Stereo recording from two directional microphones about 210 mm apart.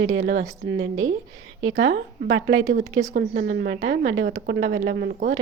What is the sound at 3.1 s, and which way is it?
A woman's voice, 45° right (ahead or behind).